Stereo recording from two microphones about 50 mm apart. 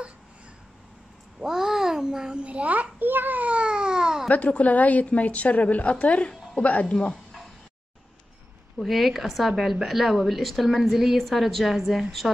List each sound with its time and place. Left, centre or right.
1.4 s a sound: centre
4.3 s a woman's voice: left
8.7 s a woman's voice: centre